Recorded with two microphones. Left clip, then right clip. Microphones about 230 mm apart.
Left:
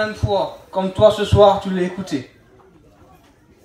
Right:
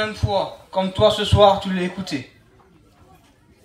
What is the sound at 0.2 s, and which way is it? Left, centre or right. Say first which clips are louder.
A man's voice: left 2 dB; right.